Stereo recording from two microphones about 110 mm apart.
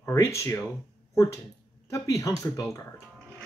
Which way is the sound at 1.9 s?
30° left (ahead or behind).